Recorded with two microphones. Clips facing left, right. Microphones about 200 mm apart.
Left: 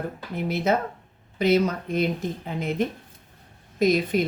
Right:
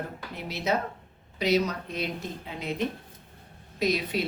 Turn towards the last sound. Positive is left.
turn(degrees=50)  # may be behind; listen again after turning